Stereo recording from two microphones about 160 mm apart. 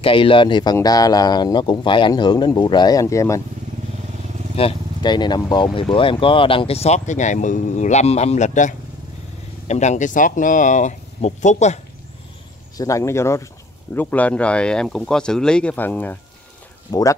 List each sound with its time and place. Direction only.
0.0 s speech: 35° left (ahead or behind)
4.6 s speech: 30° left (ahead or behind)
12.7 s speech: 20° left (ahead or behind)
16.9 s speech: 20° left (ahead or behind)